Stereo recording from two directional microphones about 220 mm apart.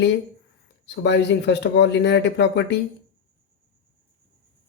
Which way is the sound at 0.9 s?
55° left (ahead or behind).